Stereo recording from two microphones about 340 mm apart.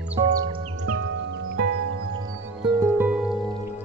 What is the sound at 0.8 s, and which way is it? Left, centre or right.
Music, right.